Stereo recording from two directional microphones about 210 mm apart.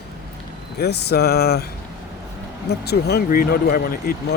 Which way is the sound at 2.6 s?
50° left (ahead or behind).